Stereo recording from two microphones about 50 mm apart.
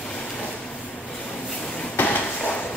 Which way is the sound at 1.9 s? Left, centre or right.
Left.